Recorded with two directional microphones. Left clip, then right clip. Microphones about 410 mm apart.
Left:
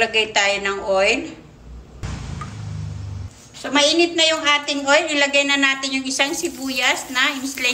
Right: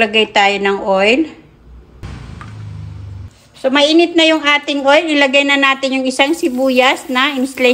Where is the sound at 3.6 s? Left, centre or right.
Centre.